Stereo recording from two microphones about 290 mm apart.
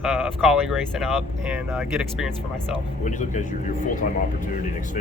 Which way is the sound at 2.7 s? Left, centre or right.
Left.